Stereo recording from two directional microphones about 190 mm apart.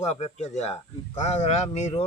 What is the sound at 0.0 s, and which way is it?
A man's voice, 35° left (ahead or behind).